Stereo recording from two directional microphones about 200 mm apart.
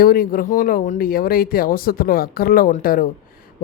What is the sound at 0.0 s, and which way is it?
Speech, 45° left (ahead or behind).